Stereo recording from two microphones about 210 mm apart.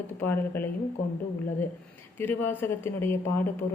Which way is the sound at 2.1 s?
10° left (ahead or behind).